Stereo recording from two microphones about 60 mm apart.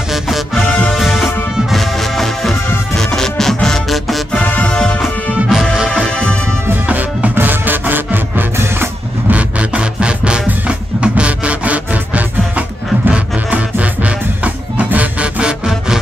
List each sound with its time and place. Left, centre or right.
0.1 s music: centre
0.7 s music: left
0.9 s music: centre
4.3 s music: left
5.0 s music: centre
6.7 s music: right
9.3 s music: centre